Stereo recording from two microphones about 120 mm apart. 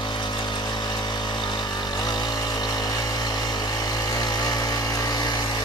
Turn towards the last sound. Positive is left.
turn(degrees=35)  # may be behind; listen again after turning